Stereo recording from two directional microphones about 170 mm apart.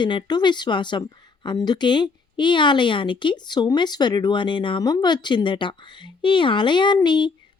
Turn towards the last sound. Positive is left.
turn(degrees=25)  # may be behind; listen again after turning